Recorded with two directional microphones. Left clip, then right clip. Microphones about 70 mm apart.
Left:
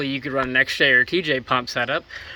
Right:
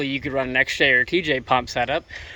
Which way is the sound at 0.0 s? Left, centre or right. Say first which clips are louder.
Even; right.